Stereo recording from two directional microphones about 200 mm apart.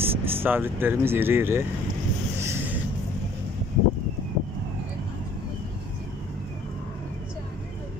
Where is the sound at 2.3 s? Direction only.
10° right (ahead or behind).